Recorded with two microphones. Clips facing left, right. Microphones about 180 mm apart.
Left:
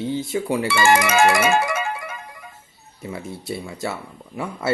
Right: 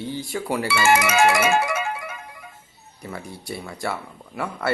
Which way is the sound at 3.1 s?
25° left (ahead or behind).